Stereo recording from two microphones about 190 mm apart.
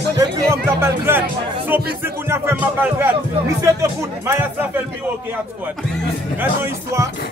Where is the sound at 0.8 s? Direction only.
10° right (ahead or behind).